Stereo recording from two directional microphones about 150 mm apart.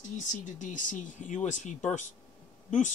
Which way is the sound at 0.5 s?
55° left (ahead or behind).